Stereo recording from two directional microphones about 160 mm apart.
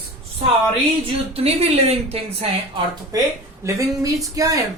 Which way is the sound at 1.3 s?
40° right (ahead or behind).